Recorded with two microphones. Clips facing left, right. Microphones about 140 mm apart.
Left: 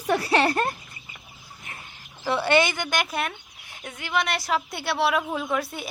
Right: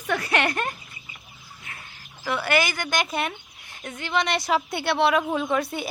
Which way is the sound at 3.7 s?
10° left (ahead or behind).